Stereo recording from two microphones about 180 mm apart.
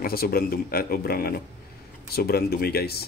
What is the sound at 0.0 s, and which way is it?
Speech, 55° left (ahead or behind).